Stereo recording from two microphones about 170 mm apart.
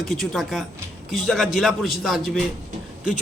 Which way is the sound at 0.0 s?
Centre (ahead or behind).